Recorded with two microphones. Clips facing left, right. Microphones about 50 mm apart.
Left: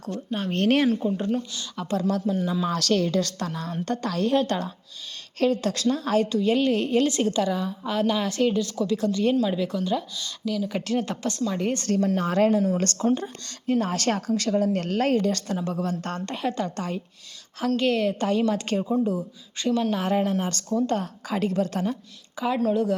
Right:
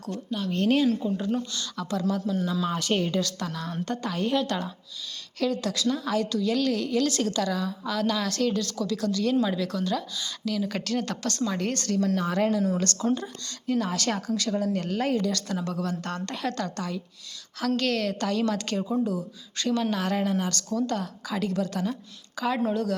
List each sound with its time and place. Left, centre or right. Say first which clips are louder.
0.3 s a woman's voice: left 2 dB; left
2.6 s speech: left 3 dB; left
3.2 s a woman's voice: left 2 dB; left
3.8 s a woman's voice: left 4 dB; left
6.2 s speech: left 3 dB; left
7.1 s speech: left 3 dB; left
9.3 s speech: left 2 dB; centre
10.8 s speech: left 2 dB; left
12.1 s a woman's voice: left 6 dB; left
15.3 s a woman's voice: left 3 dB; left
22.4 s speech: left 3 dB; centre